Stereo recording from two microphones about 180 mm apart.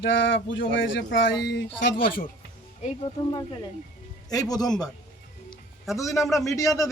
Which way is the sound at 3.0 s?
25° left (ahead or behind).